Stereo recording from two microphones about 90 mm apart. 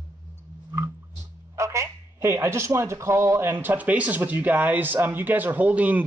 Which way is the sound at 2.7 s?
35° right (ahead or behind).